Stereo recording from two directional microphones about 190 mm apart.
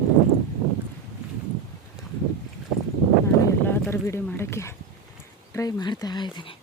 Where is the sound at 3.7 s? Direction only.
15° left (ahead or behind).